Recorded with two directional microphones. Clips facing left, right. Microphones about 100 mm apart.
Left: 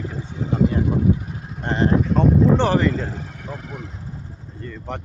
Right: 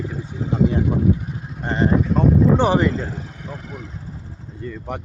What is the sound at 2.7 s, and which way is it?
Speech, 15° right (ahead or behind).